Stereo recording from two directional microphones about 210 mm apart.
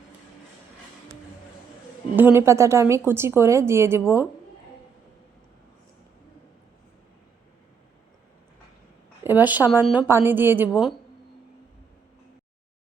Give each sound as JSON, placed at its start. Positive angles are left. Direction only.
{"t": 2.1, "sound": "a woman's voice", "side_deg": -10}
{"t": 9.2, "sound": "a woman's voice", "side_deg": -10}